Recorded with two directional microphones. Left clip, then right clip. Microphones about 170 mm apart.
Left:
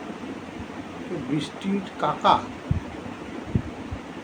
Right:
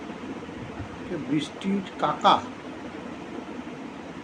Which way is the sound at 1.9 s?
5° right (ahead or behind).